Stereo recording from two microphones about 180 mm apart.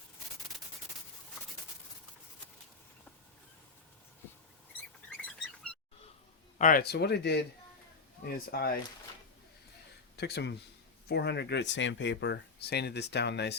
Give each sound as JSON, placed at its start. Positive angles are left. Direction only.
{"t": 6.6, "sound": "speech", "side_deg": 50}
{"t": 10.2, "sound": "speech", "side_deg": 65}